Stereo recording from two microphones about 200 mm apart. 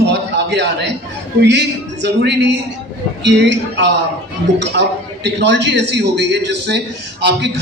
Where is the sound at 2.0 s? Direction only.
60° right (ahead or behind).